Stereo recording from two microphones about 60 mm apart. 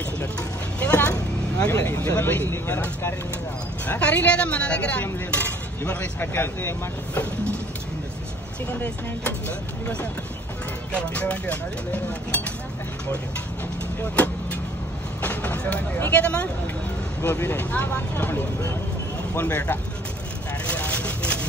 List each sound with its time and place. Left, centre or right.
0.7 s vehicle: left
1.7 s speech: left
4.0 s speech: left
11.0 s speech: left
14.1 s vehicle: left
16.1 s speech: left
17.2 s speech: left
17.6 s speech: left
20.6 s vehicle: left